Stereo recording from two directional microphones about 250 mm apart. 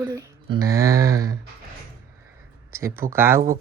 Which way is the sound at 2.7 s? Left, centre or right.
Centre.